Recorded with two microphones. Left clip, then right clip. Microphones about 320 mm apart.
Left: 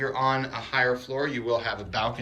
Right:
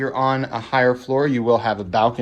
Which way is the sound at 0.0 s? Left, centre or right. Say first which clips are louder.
Right 5 dB; centre.